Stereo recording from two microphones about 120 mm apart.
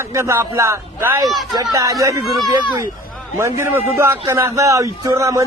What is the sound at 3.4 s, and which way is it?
Speech, 20° right (ahead or behind).